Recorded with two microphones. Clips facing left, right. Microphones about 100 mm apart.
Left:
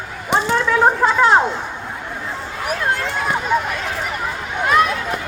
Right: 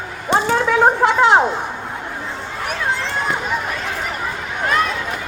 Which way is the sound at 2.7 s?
5° left (ahead or behind).